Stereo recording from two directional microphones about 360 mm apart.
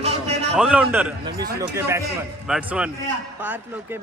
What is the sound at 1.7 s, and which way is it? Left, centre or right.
A man's voice, centre.